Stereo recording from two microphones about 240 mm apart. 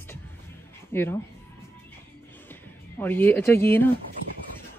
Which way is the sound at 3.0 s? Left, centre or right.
Centre.